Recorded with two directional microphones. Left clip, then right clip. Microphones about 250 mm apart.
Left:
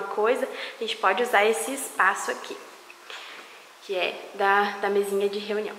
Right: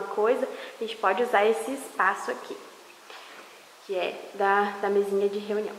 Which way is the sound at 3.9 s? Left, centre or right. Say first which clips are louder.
Left 2 dB; centre.